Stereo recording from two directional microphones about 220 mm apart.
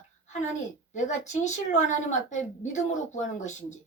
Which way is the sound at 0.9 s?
35° left (ahead or behind).